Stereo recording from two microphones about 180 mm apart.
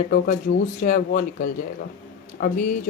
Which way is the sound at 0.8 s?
50° left (ahead or behind).